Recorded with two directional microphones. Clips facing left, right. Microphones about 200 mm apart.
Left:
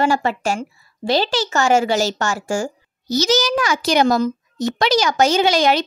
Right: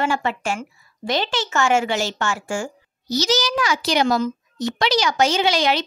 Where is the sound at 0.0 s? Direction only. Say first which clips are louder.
Left 4 dB; 40° left (ahead or behind).